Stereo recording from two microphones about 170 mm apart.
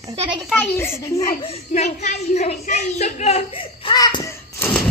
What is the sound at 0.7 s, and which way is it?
Speech, 15° left (ahead or behind).